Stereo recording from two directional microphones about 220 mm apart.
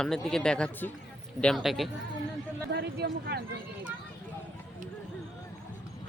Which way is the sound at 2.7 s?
50° right (ahead or behind).